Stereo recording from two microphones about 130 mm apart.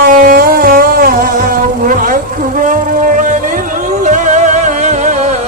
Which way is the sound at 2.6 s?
90° right.